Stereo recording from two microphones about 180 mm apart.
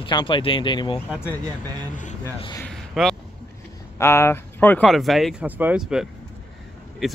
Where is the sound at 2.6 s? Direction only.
Centre (ahead or behind).